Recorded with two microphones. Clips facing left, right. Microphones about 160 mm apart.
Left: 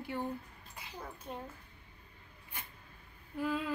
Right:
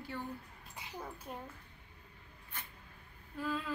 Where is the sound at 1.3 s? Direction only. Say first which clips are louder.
Left 4 dB; 5° right (ahead or behind).